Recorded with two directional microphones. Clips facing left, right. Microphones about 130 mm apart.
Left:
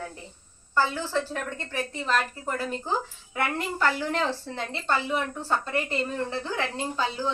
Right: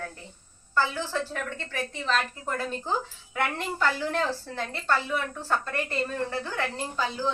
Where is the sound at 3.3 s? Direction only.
5° left (ahead or behind).